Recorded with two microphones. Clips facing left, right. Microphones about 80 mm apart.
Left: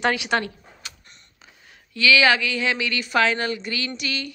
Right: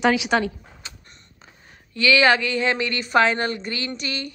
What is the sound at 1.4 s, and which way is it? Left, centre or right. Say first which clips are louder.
A woman's voice: right 2 dB; right.